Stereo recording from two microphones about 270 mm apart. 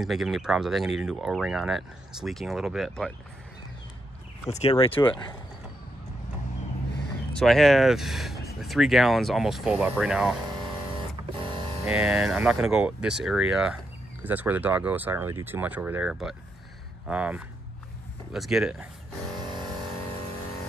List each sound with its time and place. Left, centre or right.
0.0 s speech: centre
4.5 s speech: left
7.3 s speech: centre
11.9 s speech: centre